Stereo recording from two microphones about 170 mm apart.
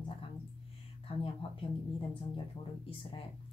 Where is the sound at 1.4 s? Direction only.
35° left (ahead or behind).